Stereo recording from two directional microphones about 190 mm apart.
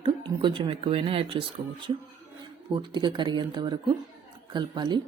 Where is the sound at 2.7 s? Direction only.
25° right (ahead or behind).